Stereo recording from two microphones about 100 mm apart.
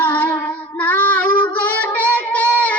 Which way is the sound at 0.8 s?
15° left (ahead or behind).